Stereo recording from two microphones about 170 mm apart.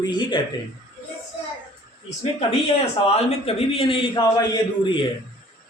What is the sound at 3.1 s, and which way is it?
A man's voice, 35° left (ahead or behind).